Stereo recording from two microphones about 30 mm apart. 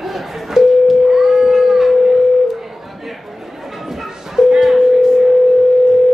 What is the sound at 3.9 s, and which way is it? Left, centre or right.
Bow-wow, centre.